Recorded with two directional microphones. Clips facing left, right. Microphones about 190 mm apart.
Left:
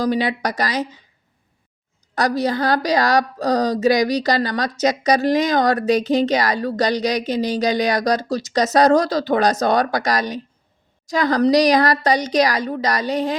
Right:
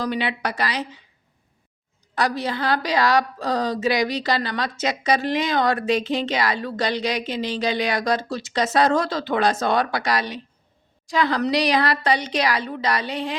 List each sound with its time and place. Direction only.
0.0 s a woman's voice: 40° left (ahead or behind)
2.1 s a woman's voice: 40° left (ahead or behind)